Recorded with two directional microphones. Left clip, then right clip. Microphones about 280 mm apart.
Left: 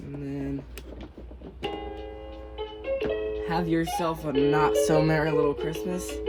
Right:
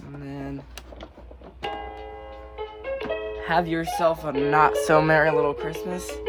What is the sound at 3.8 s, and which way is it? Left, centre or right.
Speech, right.